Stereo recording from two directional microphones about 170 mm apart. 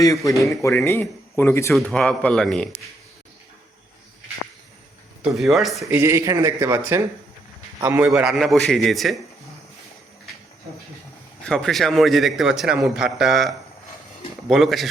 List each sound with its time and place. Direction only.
0.0 s a man's voice: 20° left (ahead or behind)
5.4 s a man's voice: centre (ahead or behind)
5.9 s a man's voice: 15° right (ahead or behind)
11.4 s a man's voice: 5° left (ahead or behind)